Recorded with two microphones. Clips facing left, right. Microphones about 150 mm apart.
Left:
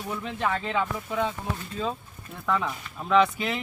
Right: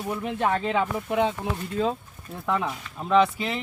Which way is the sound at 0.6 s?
25° right (ahead or behind).